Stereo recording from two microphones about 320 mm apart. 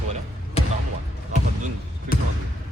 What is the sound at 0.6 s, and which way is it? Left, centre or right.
Basketball bounce, centre.